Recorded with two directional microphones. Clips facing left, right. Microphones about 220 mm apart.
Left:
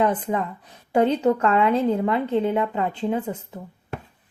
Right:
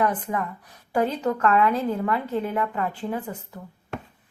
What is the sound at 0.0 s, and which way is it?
A woman's voice, 25° left (ahead or behind).